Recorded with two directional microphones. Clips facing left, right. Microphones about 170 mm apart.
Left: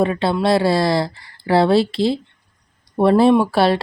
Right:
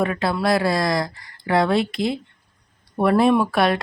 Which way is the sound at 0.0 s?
25° left (ahead or behind).